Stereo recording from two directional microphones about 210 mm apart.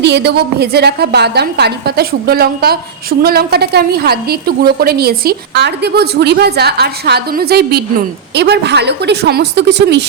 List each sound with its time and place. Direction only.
0.0 s a woman's voice: 55° right (ahead or behind)